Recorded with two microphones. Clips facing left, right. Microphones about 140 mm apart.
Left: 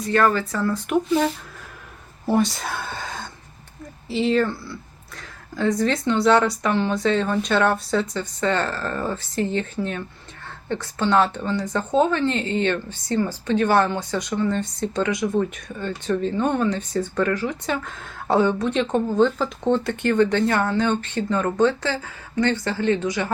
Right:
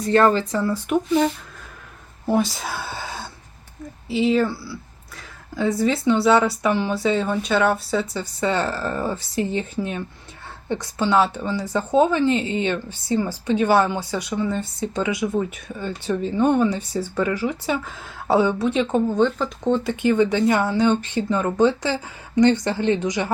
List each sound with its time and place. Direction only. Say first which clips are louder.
0.0 s speech: right 3 dB; 30° right (ahead or behind)
0.5 s speech: right 1 dB; 5° right (ahead or behind)